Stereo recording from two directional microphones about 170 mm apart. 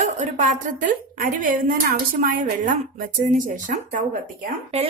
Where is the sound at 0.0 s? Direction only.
45° right (ahead or behind).